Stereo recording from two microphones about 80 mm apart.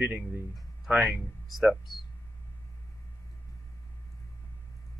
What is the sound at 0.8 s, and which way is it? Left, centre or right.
Speech, centre.